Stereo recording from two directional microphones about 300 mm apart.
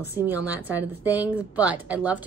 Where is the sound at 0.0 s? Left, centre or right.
Centre.